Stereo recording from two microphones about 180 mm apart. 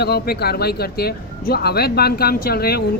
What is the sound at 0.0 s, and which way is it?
Speech, 60° left (ahead or behind).